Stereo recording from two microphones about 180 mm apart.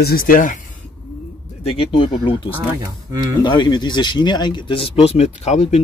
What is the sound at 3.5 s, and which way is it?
Speech, 25° left (ahead or behind).